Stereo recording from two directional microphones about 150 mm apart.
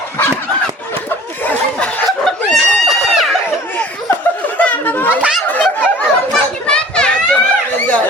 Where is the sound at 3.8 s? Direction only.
10° left (ahead or behind).